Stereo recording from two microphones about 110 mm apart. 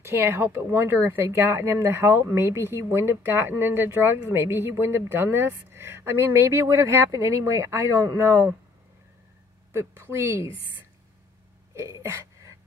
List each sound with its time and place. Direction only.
0.0 s a woman's voice: 20° right (ahead or behind)
9.7 s a woman's voice: 20° right (ahead or behind)
11.7 s a sound: 25° right (ahead or behind)